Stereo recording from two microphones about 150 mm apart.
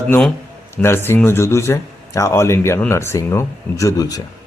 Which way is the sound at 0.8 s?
15° left (ahead or behind).